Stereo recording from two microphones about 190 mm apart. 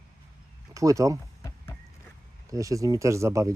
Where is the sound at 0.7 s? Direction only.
15° right (ahead or behind).